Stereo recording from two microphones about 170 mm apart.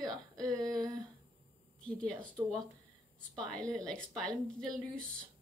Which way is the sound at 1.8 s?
5° left (ahead or behind).